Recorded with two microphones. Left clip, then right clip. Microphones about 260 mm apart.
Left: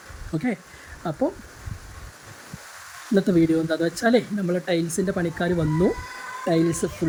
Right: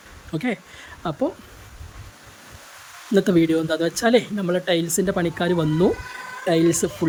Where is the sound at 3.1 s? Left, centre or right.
Centre.